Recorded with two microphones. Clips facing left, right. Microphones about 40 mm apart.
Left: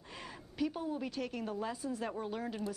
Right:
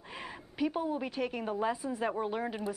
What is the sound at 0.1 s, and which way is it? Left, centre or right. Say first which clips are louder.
A woman's voice: right 4 dB; centre.